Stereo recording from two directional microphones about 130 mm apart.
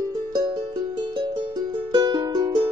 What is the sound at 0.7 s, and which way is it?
Music, 35° right (ahead or behind).